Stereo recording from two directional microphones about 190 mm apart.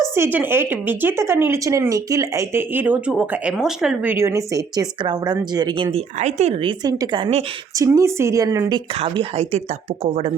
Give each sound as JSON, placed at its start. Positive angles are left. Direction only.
{"t": 0.2, "sound": "a woman's voice", "side_deg": -10}
{"t": 6.1, "sound": "a woman's voice", "side_deg": -35}
{"t": 9.0, "sound": "speech", "side_deg": -35}